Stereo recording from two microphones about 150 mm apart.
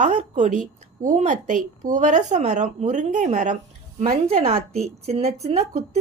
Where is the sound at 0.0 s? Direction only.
50° right (ahead or behind).